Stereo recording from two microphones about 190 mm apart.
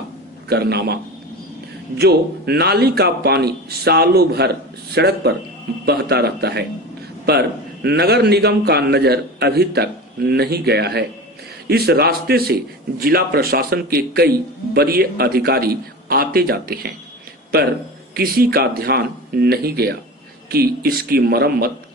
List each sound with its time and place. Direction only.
0.5 s a man's voice: 60° right (ahead or behind)
2.0 s a man's voice: 55° right (ahead or behind)
18.1 s a man's voice: 55° right (ahead or behind)